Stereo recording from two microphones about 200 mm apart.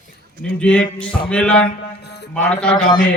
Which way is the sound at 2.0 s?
55° left (ahead or behind).